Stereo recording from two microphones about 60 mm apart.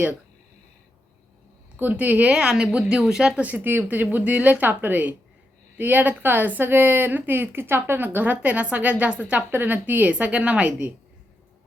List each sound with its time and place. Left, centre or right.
1.7 s speech: right; by 3.4 s centre
3.6 s a woman's voice: right